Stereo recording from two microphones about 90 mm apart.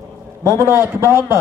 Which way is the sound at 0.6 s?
25° right (ahead or behind).